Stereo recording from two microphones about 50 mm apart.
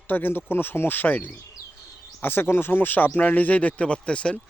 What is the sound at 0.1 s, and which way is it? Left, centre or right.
Speech, left.